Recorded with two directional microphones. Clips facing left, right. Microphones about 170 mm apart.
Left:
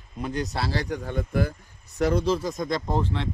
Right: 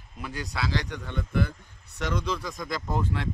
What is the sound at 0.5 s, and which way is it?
Speech, 30° left (ahead or behind).